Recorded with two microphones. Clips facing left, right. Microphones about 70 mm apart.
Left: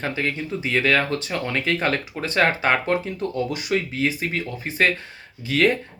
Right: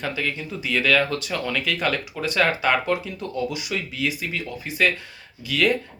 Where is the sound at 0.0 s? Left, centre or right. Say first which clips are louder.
Left 2 dB; left.